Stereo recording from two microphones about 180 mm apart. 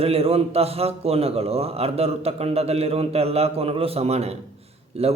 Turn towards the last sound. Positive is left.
turn(degrees=-35)  # may be behind; listen again after turning